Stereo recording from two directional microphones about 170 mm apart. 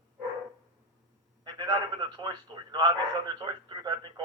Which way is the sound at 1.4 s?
25° right (ahead or behind).